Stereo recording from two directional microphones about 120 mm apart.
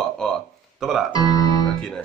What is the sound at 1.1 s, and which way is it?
Speech, 30° left (ahead or behind).